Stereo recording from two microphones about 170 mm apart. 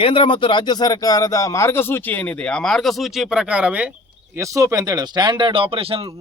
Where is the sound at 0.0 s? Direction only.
30° left (ahead or behind); by 3.8 s 5° right (ahead or behind).